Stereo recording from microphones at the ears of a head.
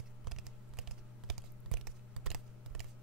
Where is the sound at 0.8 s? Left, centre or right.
Right.